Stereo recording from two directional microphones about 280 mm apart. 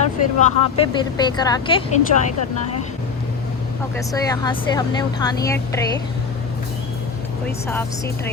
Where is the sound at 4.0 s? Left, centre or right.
Centre.